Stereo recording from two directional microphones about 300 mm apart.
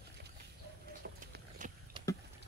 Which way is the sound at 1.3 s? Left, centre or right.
Right.